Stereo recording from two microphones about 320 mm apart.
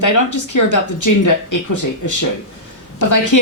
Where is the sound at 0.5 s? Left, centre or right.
Left.